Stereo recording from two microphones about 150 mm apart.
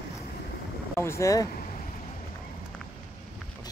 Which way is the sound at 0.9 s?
20° left (ahead or behind).